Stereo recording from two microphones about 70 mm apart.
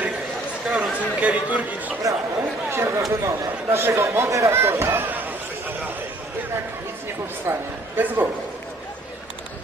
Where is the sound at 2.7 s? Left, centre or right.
Right.